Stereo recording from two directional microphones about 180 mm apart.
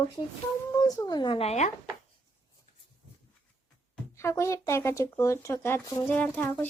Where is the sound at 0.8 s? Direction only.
20° left (ahead or behind); by 1.7 s 40° left (ahead or behind).